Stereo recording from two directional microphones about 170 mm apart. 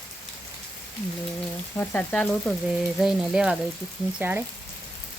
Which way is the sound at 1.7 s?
10° left (ahead or behind).